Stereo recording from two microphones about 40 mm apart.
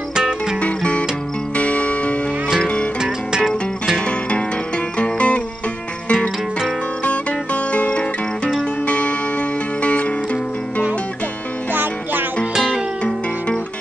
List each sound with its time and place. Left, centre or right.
0.1 s music: centre
0.6 s music: left
3.0 s music: centre
4.9 s music: left
7.7 s music: left
11.7 s music: right